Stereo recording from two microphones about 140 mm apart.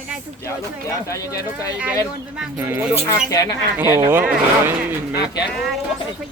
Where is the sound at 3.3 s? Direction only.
25° left (ahead or behind).